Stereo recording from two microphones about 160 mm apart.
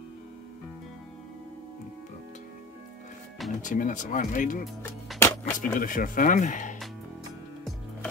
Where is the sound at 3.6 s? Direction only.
55° left (ahead or behind).